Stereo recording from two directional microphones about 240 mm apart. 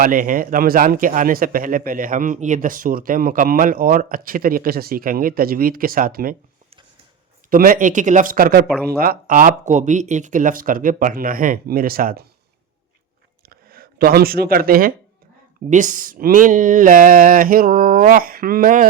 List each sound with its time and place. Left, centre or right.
0.0 s a man's voice: right
7.5 s a man's voice: right
13.4 s a sound: right
15.7 s a man's voice: right